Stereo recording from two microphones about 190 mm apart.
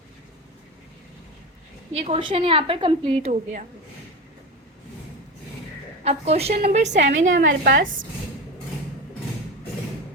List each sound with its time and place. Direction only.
1.9 s a woman's voice: 30° right (ahead or behind)
6.0 s a woman's voice: 35° right (ahead or behind)
7.0 s a woman's voice: 85° right
7.6 s a woman's voice: 65° right (ahead or behind)